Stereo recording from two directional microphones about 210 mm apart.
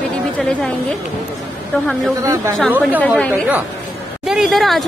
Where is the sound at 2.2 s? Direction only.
15° right (ahead or behind).